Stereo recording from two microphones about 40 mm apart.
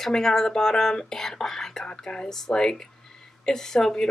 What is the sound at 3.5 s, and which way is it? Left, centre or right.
Speech, centre.